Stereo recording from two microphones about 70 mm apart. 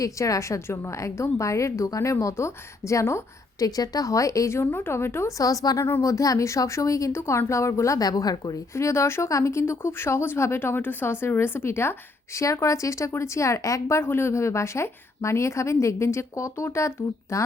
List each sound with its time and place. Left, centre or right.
0.0 s a woman's voice: left
3.6 s a woman's voice: left
4.5 s speech: left
5.4 s a woman's voice: left
7.9 s a woman's voice: left
8.7 s a woman's voice: left